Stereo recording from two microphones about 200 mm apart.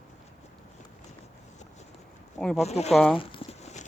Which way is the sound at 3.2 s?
30° left (ahead or behind).